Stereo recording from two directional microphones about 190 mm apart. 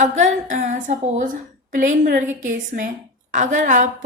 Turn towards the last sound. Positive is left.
turn(degrees=-40)  # may be behind; listen again after turning